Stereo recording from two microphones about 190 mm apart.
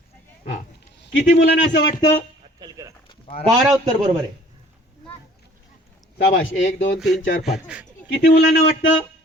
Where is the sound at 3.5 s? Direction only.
Centre (ahead or behind).